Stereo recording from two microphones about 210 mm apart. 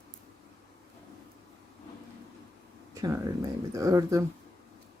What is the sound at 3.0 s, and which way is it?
Speech, 15° right (ahead or behind).